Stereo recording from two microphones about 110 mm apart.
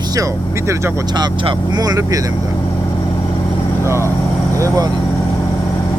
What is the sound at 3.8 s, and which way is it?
Speech, 25° right (ahead or behind).